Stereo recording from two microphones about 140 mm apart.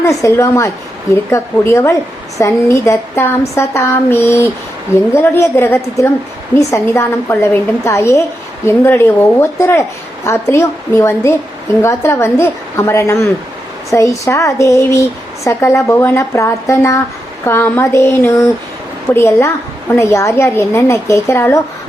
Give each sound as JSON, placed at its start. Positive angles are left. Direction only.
{"t": 0.0, "sound": "a woman's voice", "side_deg": 25}